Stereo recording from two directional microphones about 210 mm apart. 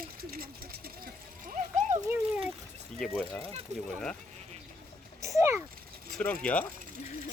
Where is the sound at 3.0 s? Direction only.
5° left (ahead or behind).